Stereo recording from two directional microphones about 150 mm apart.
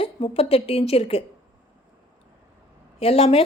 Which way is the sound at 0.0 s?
40° left (ahead or behind).